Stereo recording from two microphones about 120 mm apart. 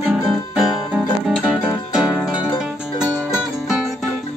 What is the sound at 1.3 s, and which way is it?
Music, 5° right (ahead or behind).